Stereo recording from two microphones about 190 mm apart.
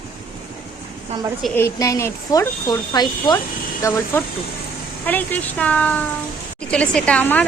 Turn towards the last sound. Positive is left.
turn(degrees=10)  # may be behind; listen again after turning